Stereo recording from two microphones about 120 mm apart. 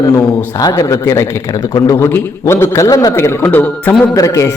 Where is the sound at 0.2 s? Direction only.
30° left (ahead or behind).